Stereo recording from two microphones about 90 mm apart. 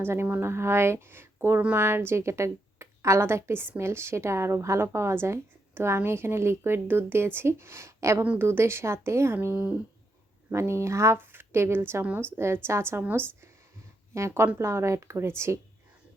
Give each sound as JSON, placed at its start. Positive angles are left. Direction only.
{"t": 0.0, "sound": "speech", "side_deg": -25}
{"t": 14.1, "sound": "a woman's voice", "side_deg": -30}